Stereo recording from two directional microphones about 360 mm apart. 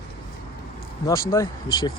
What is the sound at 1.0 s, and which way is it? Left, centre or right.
Speech, centre.